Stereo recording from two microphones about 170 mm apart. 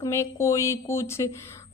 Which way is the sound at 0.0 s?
15° left (ahead or behind).